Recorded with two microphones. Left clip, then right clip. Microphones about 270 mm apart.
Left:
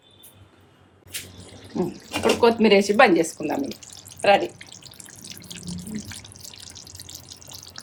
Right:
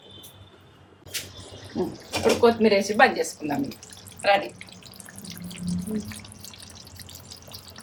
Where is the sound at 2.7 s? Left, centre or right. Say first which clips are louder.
Left 3 dB; left.